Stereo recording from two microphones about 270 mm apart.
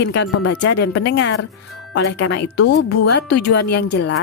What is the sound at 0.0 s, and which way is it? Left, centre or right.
Speech, left.